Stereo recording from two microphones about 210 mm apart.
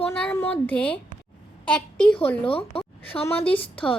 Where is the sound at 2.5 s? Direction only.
25° left (ahead or behind).